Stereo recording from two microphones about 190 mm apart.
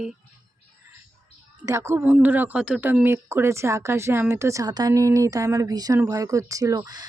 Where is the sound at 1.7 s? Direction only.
15° right (ahead or behind).